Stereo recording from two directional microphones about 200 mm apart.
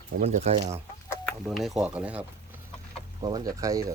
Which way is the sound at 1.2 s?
Centre (ahead or behind).